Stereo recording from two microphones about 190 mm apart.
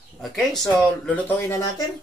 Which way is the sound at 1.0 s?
10° left (ahead or behind).